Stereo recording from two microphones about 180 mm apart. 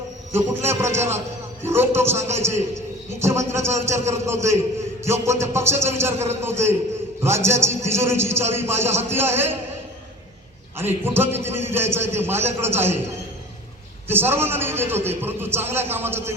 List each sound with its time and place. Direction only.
0.3 s a man's voice: 15° right (ahead or behind)
10.8 s a man's voice: 15° right (ahead or behind)
14.1 s a man's voice: 10° right (ahead or behind)